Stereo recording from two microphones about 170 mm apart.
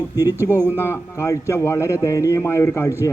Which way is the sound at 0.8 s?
15° left (ahead or behind).